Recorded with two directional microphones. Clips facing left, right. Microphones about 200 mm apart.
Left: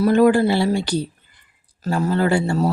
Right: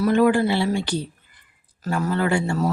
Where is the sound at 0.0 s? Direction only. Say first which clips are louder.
Left 3 dB; 40° left (ahead or behind).